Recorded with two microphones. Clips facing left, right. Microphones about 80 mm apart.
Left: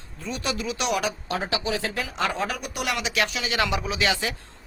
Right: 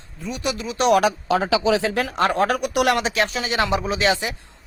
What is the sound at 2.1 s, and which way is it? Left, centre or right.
Speech, right.